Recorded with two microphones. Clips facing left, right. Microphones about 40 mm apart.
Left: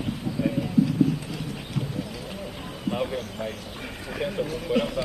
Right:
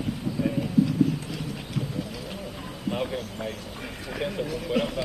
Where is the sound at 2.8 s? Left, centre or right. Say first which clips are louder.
Left 1 dB; centre.